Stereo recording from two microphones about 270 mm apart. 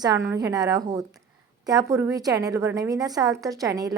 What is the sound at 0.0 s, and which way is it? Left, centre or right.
A woman's voice, centre.